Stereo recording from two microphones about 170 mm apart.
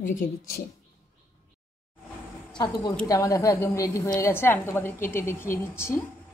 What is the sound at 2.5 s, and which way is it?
A woman's voice, 25° left (ahead or behind).